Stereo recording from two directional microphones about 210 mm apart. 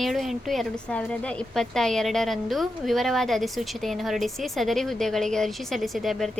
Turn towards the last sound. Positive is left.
turn(degrees=0)  # may be behind; listen again after turning